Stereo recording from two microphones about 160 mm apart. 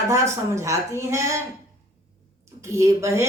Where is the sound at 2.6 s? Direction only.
20° right (ahead or behind).